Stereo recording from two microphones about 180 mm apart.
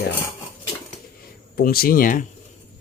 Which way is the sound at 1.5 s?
55° left (ahead or behind).